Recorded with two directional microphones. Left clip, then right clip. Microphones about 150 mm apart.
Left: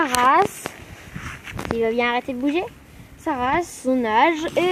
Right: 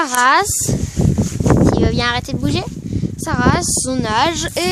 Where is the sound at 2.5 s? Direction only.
40° right (ahead or behind).